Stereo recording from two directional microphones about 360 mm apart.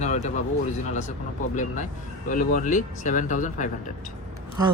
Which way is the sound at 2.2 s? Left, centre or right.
Left.